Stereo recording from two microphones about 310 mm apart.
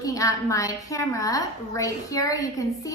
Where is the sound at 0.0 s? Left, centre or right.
Centre.